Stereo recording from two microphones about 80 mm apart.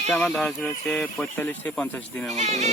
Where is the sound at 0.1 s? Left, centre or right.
Centre.